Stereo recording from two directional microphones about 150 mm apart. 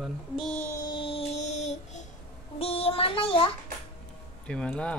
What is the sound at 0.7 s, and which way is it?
Child singing, 30° left (ahead or behind).